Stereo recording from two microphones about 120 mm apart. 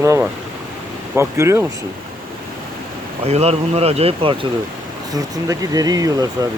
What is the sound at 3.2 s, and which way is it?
Speech, 60° right (ahead or behind).